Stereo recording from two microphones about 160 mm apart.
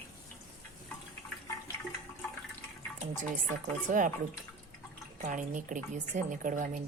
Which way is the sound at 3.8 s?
55° right (ahead or behind).